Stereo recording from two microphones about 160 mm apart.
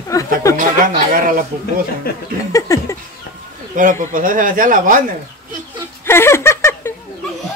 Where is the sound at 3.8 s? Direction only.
55° right (ahead or behind).